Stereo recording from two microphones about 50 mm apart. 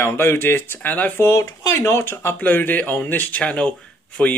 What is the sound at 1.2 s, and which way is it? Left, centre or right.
Speech, left.